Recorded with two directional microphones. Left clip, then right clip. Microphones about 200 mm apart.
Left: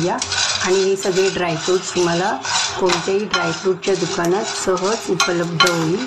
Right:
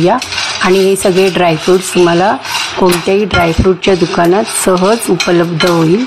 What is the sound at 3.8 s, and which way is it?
Speech, 45° right (ahead or behind).